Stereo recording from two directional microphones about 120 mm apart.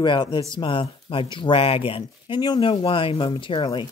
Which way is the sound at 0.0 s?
40° left (ahead or behind).